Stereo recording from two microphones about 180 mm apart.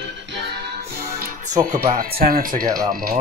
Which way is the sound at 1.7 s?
50° right (ahead or behind).